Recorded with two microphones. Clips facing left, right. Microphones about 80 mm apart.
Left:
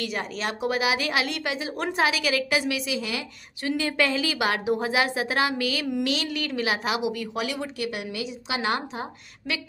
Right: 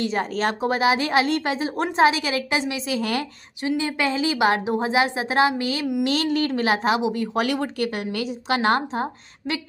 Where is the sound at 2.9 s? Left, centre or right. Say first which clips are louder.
Right 5 dB; right.